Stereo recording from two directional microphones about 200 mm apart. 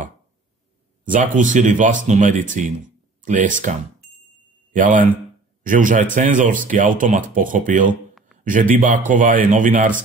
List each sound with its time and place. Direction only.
1.0 s speech: 40° right (ahead or behind)
4.7 s a man's voice: 40° right (ahead or behind)
7.9 s a sound: centre (ahead or behind)
8.5 s speech: 40° right (ahead or behind)